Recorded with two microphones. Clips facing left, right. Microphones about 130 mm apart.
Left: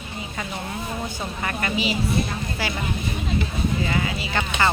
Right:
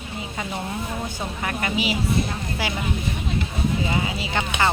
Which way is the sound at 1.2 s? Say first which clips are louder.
Even; 10° right (ahead or behind).